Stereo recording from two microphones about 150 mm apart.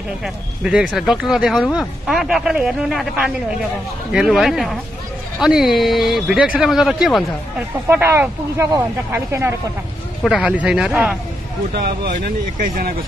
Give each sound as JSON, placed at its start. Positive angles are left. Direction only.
{"t": 0.2, "sound": "speech", "side_deg": -5}
{"t": 7.9, "sound": "speech", "side_deg": -15}
{"t": 10.2, "sound": "speech", "side_deg": 0}
{"t": 11.7, "sound": "speech", "side_deg": -90}